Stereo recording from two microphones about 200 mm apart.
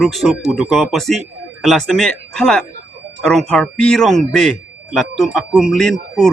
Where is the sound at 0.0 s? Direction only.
Centre (ahead or behind).